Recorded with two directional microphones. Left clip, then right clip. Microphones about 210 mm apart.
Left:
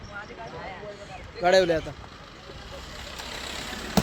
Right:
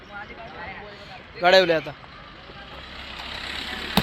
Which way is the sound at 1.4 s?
5° right (ahead or behind).